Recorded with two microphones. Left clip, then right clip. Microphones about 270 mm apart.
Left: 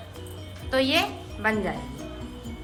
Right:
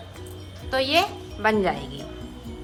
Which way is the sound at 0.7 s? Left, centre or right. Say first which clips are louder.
Right 2 dB; centre.